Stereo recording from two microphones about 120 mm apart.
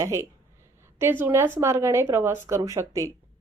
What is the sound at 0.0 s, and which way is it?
A woman's voice, 25° right (ahead or behind).